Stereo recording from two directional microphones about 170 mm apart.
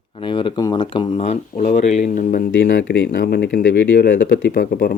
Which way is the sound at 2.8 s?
90° left.